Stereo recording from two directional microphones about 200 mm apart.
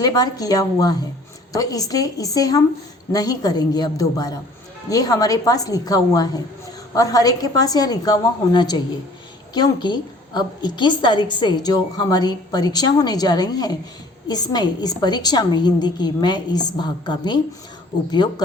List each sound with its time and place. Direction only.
0.0 s a woman's voice: 20° left (ahead or behind)